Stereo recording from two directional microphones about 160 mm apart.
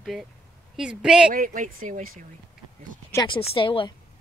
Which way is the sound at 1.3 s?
60° right (ahead or behind).